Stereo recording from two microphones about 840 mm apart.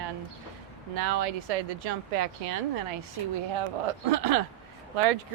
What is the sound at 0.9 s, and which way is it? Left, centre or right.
Speech, right.